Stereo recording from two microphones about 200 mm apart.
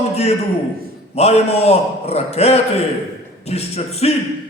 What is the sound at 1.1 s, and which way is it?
A man's voice, 30° left (ahead or behind).